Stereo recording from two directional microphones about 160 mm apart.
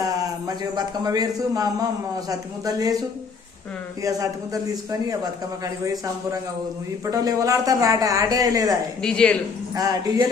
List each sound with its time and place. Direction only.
0.0 s a man's voice: 20° right (ahead or behind)
4.0 s speech: 20° right (ahead or behind)
9.0 s speech: 5° left (ahead or behind)
9.7 s speech: 20° right (ahead or behind)